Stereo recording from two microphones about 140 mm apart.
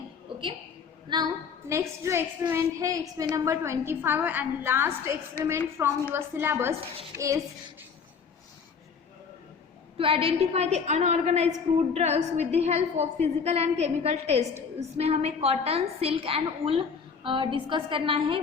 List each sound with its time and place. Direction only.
0.3 s a sound: 35° right (ahead or behind)
1.1 s a woman's voice: 30° right (ahead or behind)
1.6 s a woman's voice: 20° right (ahead or behind)
10.0 s a woman's voice: 40° right (ahead or behind)